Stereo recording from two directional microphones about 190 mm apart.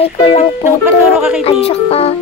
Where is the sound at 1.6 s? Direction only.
30° left (ahead or behind).